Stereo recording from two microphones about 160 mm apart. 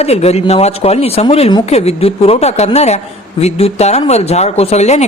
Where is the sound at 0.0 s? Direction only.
40° left (ahead or behind).